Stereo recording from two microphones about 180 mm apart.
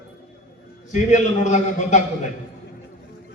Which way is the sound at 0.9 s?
40° left (ahead or behind).